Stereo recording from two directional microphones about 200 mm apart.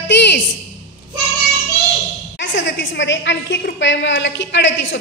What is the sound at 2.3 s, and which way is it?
A woman's voice, 65° left (ahead or behind).